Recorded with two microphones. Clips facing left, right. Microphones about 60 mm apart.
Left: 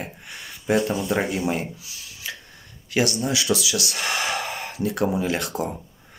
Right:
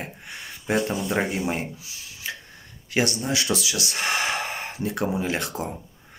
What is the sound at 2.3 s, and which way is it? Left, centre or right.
Finger snapping, right.